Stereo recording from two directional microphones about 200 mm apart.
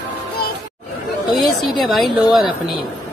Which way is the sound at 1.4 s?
Centre (ahead or behind).